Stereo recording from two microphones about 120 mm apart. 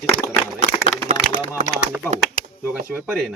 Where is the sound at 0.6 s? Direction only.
90° right.